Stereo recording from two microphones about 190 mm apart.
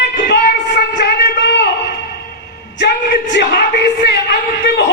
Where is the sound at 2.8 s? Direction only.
65° left (ahead or behind).